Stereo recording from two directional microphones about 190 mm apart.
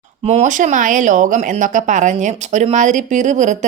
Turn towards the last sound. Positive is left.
turn(degrees=-40)  # may be behind; listen again after turning